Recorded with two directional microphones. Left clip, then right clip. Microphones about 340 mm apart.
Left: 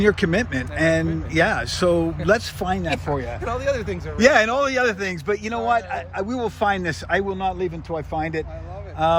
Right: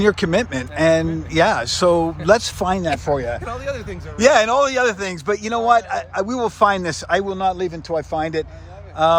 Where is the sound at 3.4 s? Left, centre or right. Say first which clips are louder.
Left 3 dB; centre.